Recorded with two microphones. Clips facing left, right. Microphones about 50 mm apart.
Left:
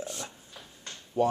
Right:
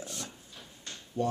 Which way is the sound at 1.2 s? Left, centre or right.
Left.